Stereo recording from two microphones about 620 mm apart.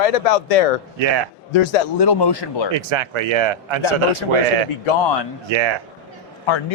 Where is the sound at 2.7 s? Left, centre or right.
Right.